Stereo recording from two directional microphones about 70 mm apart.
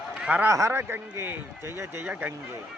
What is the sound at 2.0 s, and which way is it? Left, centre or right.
Speech, right.